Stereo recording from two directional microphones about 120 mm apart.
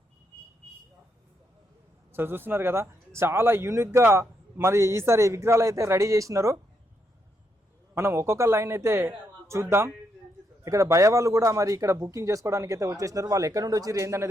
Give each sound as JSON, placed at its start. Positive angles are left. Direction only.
{"t": 2.1, "sound": "a man's voice", "side_deg": -20}
{"t": 7.9, "sound": "a man's voice", "side_deg": -20}